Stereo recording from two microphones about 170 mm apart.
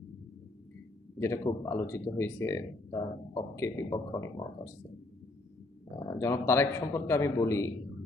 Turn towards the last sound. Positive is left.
turn(degrees=20)  # may be behind; listen again after turning